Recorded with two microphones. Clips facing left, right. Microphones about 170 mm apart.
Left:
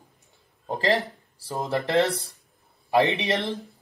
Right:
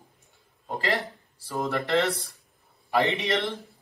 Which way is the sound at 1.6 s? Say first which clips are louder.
Left 2 dB; 20° left (ahead or behind).